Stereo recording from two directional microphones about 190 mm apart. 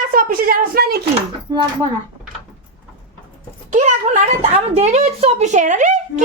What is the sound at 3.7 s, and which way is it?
A woman's voice, 40° right (ahead or behind).